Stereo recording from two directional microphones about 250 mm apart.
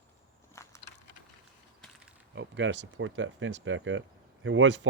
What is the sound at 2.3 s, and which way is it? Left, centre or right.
Speech, right.